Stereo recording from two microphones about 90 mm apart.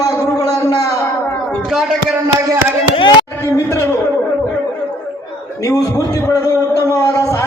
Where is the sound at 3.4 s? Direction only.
35° left (ahead or behind).